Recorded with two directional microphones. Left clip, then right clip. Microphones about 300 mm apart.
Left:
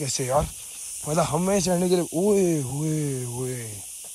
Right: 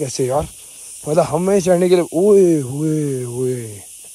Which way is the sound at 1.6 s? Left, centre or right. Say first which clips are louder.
Right 10 dB; right.